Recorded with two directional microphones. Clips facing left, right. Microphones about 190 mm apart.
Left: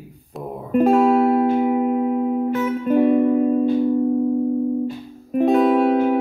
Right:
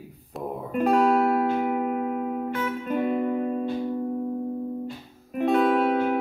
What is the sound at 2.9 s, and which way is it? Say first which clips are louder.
Music: left 10 dB; 40° left (ahead or behind).